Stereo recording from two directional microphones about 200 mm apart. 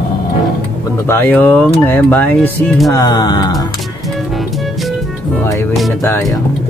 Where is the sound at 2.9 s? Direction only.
20° left (ahead or behind).